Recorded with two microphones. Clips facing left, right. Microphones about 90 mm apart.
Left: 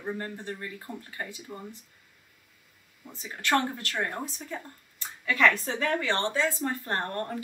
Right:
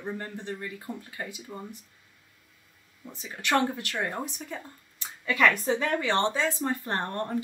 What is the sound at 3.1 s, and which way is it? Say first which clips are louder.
A woman's voice: left 1 dB; 20° right (ahead or behind).